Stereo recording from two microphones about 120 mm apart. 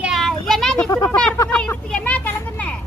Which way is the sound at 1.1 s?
10° left (ahead or behind).